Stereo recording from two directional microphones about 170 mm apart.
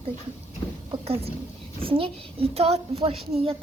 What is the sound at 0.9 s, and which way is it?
A child's voice, 35° right (ahead or behind).